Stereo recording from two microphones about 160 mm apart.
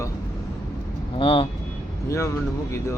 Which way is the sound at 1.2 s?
35° left (ahead or behind).